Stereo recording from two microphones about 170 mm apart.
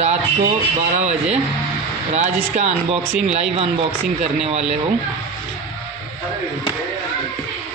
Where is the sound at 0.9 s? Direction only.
40° right (ahead or behind).